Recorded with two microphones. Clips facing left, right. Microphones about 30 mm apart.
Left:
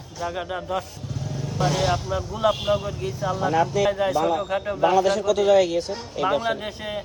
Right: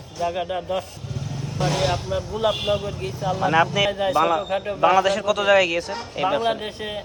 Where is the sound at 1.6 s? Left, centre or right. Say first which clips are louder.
Even; centre.